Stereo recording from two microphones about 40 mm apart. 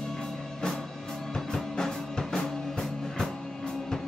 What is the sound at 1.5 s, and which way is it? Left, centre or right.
Music, centre.